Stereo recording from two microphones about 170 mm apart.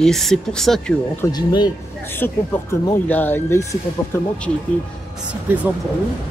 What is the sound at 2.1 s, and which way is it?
Speech, 10° left (ahead or behind).